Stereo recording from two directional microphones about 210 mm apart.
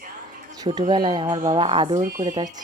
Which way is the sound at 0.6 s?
20° right (ahead or behind).